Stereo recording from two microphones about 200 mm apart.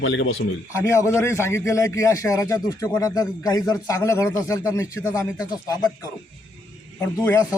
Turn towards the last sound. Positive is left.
turn(degrees=10)  # may be behind; listen again after turning